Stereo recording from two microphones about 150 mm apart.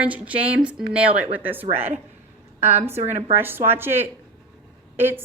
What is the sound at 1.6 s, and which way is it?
Speech, 40° right (ahead or behind).